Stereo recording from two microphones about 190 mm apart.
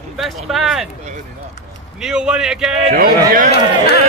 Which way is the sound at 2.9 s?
45° right (ahead or behind).